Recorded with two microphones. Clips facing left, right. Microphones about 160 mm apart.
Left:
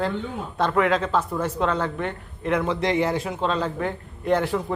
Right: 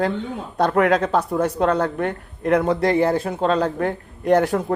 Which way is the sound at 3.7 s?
65° right (ahead or behind).